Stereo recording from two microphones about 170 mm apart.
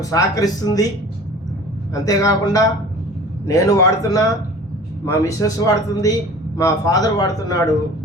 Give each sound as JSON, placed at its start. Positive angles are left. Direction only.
{"t": 0.0, "sound": "a man's voice", "side_deg": 20}
{"t": 1.9, "sound": "a man's voice", "side_deg": 20}